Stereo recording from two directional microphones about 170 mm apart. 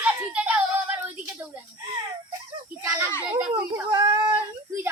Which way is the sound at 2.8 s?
20° right (ahead or behind).